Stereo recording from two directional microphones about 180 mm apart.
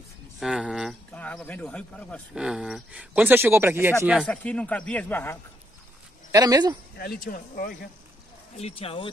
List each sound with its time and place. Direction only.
0.4 s speech: 5° right (ahead or behind)
1.1 s speech: 10° left (ahead or behind)
2.3 s speech: 5° right (ahead or behind)
4.1 s speech: centre (ahead or behind)
6.3 s speech: 20° right (ahead or behind)
7.0 s speech: 55° left (ahead or behind)
8.5 s speech: 35° left (ahead or behind)